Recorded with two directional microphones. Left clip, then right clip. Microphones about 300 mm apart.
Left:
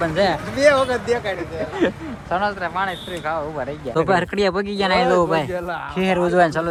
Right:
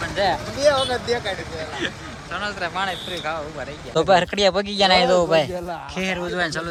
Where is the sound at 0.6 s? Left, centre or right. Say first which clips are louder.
Left 3 dB; left.